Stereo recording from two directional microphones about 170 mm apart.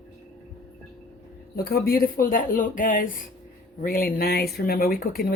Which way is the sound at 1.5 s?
65° left (ahead or behind).